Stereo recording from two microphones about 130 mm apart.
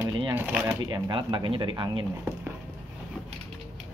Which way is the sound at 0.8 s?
25° right (ahead or behind).